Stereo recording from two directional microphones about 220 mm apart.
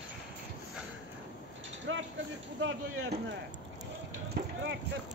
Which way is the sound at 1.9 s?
60° right (ahead or behind).